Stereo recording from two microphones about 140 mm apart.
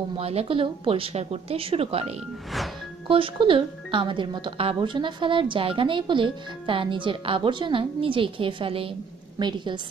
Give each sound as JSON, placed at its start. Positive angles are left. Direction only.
{"t": 0.2, "sound": "a woman's voice", "side_deg": -45}